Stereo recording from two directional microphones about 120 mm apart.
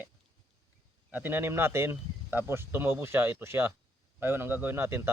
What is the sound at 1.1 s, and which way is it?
Speech, 15° right (ahead or behind).